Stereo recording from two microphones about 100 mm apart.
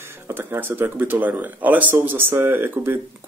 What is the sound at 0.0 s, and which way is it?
Speech, 25° right (ahead or behind).